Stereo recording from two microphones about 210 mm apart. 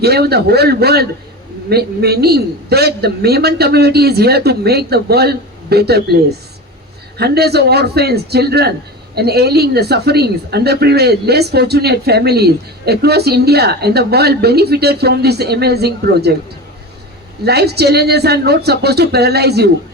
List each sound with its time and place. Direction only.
0.0 s speech: 50° right (ahead or behind)
17.4 s speech: 50° right (ahead or behind)